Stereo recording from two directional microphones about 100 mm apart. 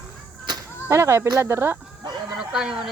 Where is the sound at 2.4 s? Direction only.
5° right (ahead or behind).